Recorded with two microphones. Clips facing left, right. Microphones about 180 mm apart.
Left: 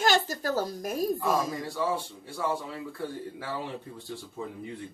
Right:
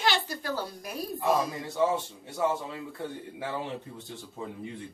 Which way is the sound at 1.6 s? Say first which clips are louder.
Right 3 dB; 20° right (ahead or behind).